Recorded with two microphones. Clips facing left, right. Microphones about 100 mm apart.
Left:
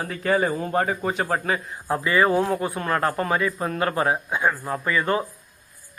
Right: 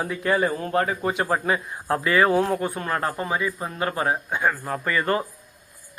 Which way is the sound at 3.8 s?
35° left (ahead or behind).